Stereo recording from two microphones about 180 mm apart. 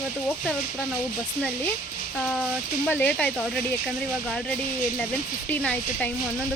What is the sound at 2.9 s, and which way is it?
Speech, 10° left (ahead or behind).